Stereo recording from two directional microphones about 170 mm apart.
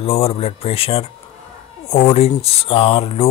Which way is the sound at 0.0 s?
35° left (ahead or behind).